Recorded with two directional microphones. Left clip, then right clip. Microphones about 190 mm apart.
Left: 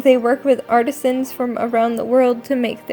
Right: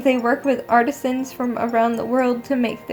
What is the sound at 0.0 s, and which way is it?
Speech, 50° left (ahead or behind).